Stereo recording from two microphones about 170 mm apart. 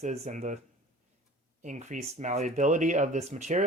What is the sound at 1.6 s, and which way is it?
Speech, 45° right (ahead or behind).